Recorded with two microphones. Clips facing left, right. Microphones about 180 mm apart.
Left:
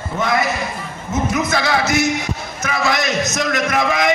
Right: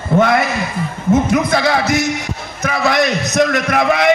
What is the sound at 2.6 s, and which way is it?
Speech, 60° right (ahead or behind).